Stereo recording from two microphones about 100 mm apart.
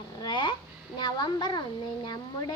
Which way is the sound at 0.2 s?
50° left (ahead or behind).